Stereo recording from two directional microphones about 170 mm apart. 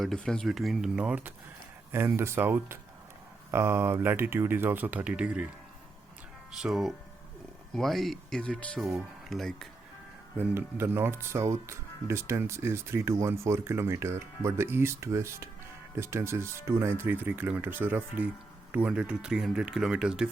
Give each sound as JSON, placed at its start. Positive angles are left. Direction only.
{"t": 0.0, "sound": "speech", "side_deg": 5}
{"t": 6.6, "sound": "speech", "side_deg": 0}
{"t": 10.3, "sound": "speech", "side_deg": -10}